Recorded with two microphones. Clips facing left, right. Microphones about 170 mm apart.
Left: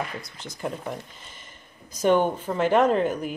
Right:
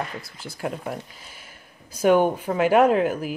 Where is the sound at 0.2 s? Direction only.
5° right (ahead or behind).